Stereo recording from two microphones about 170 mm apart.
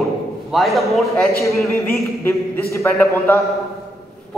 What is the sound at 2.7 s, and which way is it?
Speech, 15° left (ahead or behind).